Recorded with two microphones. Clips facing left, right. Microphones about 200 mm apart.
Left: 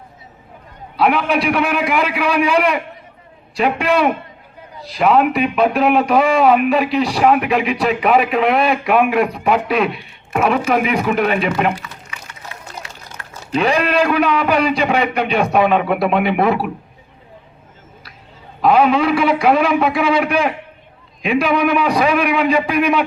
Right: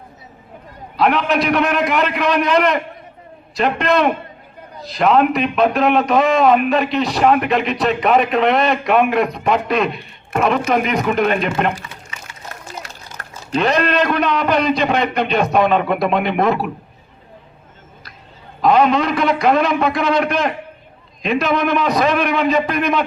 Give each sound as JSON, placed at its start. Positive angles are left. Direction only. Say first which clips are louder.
{"t": 0.9, "sound": "a man's voice", "louder": "even", "side_deg": 10}
{"t": 13.2, "sound": "crumpling", "louder": "right 1 dB", "side_deg": -45}
{"t": 13.6, "sound": "a man's voice", "louder": "left 1 dB", "side_deg": 10}
{"t": 18.6, "sound": "a man's voice", "louder": "left 1 dB", "side_deg": 5}